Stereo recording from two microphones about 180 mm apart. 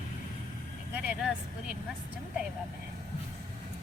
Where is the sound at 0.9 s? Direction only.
5° right (ahead or behind).